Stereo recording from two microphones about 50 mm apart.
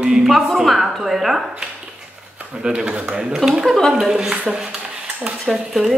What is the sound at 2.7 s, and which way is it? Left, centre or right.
Speech, centre.